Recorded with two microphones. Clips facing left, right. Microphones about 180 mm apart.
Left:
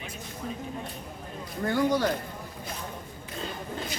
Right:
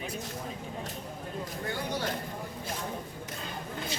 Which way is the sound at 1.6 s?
45° left (ahead or behind).